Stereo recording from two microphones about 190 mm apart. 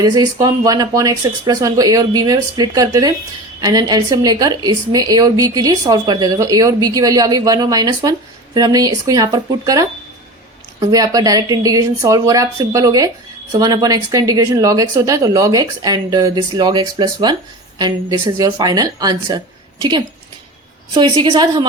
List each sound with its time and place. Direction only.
0.0 s a woman's voice: 20° right (ahead or behind)
20.9 s a woman's voice: 25° right (ahead or behind)